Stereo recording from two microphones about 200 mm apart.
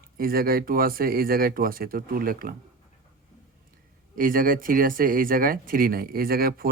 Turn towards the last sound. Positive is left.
turn(degrees=-50)  # may be behind; listen again after turning